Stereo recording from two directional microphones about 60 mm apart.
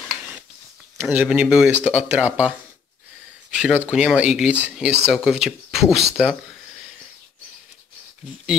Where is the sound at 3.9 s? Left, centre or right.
Centre.